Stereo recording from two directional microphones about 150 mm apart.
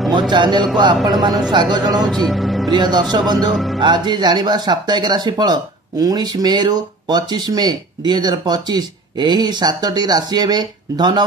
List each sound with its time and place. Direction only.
0.3 s speech: 30° right (ahead or behind)
2.0 s speech: centre (ahead or behind)
2.7 s speech: 30° right (ahead or behind)
3.5 s music: centre (ahead or behind)
3.8 s speech: 30° right (ahead or behind)